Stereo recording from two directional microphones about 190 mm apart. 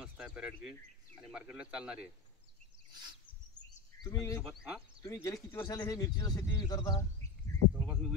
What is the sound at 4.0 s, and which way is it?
Speech, 20° left (ahead or behind).